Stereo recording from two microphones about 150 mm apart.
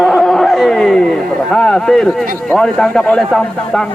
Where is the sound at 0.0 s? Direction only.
Centre (ahead or behind).